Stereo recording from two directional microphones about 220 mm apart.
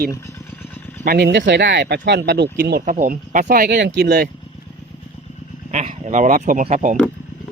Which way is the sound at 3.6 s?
50° right (ahead or behind).